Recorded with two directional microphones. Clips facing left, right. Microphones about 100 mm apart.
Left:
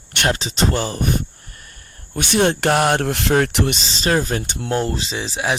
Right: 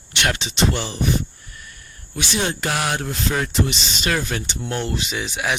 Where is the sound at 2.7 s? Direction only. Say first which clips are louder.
Left 7 dB; 45° left (ahead or behind); by 3.7 s 65° left (ahead or behind).